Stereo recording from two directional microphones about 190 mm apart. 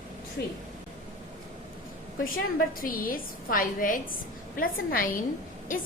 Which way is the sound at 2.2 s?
50° left (ahead or behind).